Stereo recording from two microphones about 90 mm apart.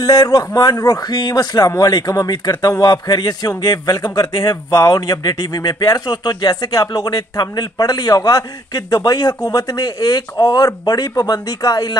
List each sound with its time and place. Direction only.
0.0 s a man's voice: 40° left (ahead or behind)